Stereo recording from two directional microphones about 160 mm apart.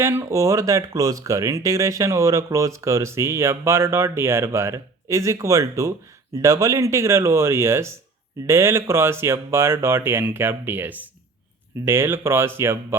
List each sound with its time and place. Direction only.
0.0 s speech: 15° right (ahead or behind)